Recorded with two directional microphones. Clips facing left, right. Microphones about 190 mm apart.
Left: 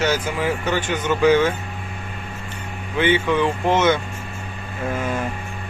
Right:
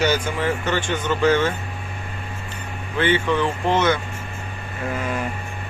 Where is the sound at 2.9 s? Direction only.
15° left (ahead or behind).